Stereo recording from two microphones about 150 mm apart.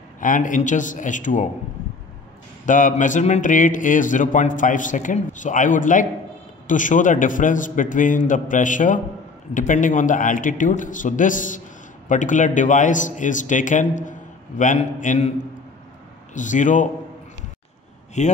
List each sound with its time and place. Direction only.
0.2 s a man's voice: 60° left (ahead or behind)
2.6 s a man's voice: 60° left (ahead or behind)
16.3 s a man's voice: 55° left (ahead or behind)
18.2 s a man's voice: 50° left (ahead or behind)